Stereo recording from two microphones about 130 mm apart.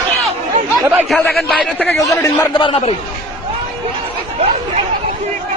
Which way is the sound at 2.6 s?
45° left (ahead or behind).